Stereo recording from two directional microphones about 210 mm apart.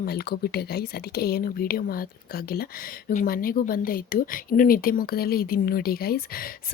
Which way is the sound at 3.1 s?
45° left (ahead or behind).